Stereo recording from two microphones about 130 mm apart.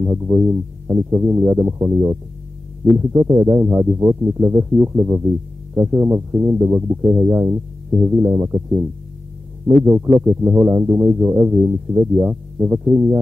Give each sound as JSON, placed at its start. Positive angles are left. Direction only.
{"t": 0.0, "sound": "speech", "side_deg": -20}
{"t": 11.1, "sound": "speech", "side_deg": -15}